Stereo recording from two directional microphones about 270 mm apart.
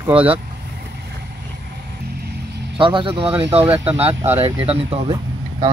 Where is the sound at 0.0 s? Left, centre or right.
Centre.